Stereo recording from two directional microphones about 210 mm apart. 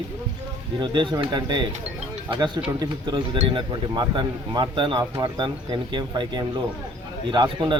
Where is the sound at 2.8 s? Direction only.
20° right (ahead or behind).